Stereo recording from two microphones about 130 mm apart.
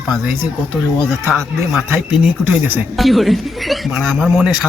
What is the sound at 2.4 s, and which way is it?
Speech, 15° right (ahead or behind).